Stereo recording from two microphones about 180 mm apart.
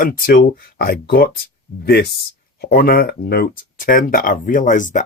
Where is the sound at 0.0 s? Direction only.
50° left (ahead or behind).